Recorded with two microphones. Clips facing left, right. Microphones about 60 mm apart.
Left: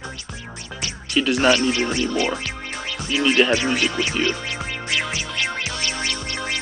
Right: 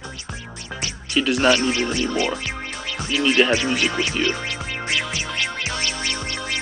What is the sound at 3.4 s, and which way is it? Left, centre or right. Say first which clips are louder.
Speech: even; centre.